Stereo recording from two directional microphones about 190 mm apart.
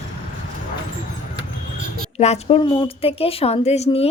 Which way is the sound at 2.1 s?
35° left (ahead or behind).